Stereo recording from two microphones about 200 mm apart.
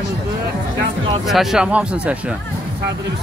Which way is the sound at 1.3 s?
Centre (ahead or behind).